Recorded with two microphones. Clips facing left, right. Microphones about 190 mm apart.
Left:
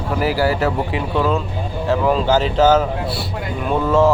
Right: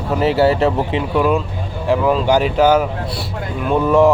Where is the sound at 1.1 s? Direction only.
15° right (ahead or behind).